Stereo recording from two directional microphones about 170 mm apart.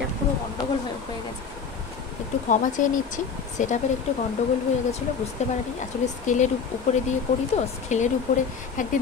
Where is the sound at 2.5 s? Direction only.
50° left (ahead or behind).